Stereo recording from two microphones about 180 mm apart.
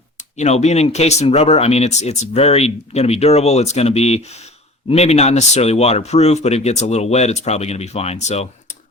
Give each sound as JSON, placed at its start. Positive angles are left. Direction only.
{"t": 0.3, "sound": "speech", "side_deg": 40}